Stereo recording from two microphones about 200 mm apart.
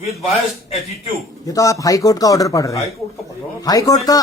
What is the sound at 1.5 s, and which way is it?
Speech, 15° left (ahead or behind).